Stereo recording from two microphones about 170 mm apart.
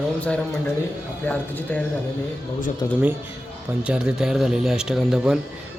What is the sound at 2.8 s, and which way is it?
Speech, 20° left (ahead or behind).